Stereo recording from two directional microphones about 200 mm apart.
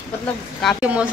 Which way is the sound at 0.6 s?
5° right (ahead or behind).